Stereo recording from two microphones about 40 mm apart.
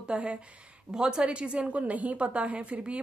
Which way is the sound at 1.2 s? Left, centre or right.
Right.